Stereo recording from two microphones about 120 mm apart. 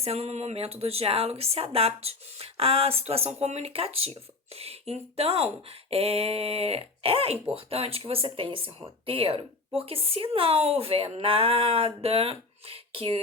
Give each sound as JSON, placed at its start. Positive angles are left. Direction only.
{"t": 0.0, "sound": "a woman's voice", "side_deg": -60}